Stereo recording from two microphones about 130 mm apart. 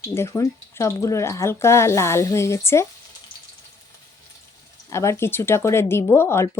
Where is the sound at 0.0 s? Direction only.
20° left (ahead or behind).